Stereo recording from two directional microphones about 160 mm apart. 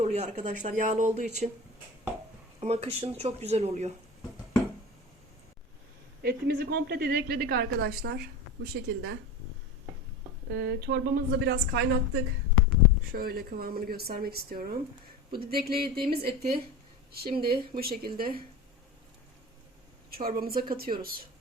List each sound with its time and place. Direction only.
0.0 s speech: 45° right (ahead or behind)
2.6 s speech: 40° right (ahead or behind)
6.2 s a woman's voice: 90° right
10.5 s a woman's voice: 90° right
13.1 s speech: 75° right (ahead or behind)
20.2 s speech: 65° right (ahead or behind)